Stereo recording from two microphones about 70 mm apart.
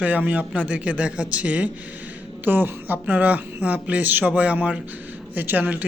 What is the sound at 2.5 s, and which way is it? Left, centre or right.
A man's voice, right.